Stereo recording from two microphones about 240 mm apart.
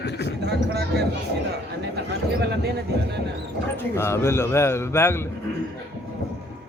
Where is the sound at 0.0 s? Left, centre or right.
Left.